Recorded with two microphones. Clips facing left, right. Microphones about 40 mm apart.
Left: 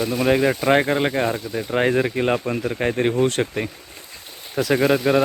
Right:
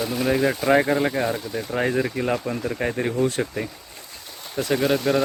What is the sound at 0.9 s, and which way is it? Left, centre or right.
Speech, left.